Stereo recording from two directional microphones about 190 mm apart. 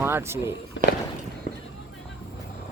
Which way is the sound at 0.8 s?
75° left (ahead or behind).